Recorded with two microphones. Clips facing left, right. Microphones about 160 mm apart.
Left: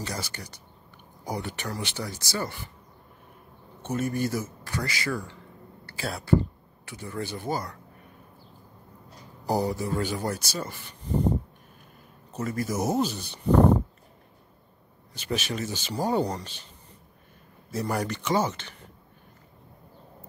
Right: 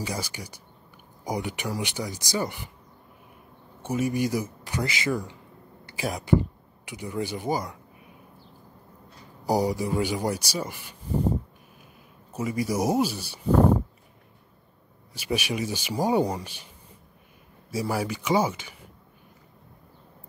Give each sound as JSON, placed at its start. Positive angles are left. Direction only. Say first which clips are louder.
{"t": 0.0, "sound": "speech", "louder": "right 2 dB", "side_deg": -10}
{"t": 3.8, "sound": "speech", "louder": "right 2 dB", "side_deg": -10}
{"t": 9.4, "sound": "speech", "louder": "right 2 dB", "side_deg": -10}
{"t": 12.3, "sound": "speech", "louder": "right 2 dB", "side_deg": -10}
{"t": 15.1, "sound": "speech", "louder": "right 2 dB", "side_deg": -10}